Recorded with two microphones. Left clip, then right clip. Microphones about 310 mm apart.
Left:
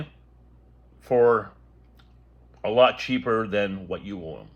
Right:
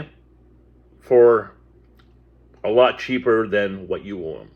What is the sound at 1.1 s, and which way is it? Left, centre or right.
Speech, centre.